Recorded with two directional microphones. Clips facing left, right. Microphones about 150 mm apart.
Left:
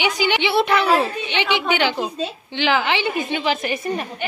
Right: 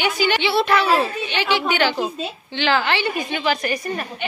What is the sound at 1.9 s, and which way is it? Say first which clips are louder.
Speech: even; centre (ahead or behind).